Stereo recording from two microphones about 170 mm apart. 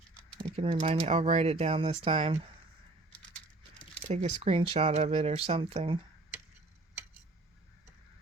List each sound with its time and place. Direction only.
0.5 s speech: 35° right (ahead or behind)
3.1 s keys jangling: 5° left (ahead or behind)
4.0 s speech: 40° right (ahead or behind)